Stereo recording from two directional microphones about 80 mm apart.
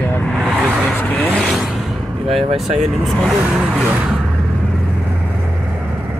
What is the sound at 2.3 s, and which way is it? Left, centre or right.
Speech, centre.